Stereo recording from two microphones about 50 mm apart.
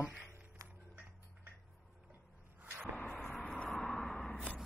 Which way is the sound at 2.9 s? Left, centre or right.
Left.